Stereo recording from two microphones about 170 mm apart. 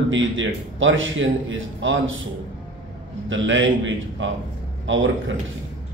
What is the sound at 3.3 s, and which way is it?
Speech, 90° right.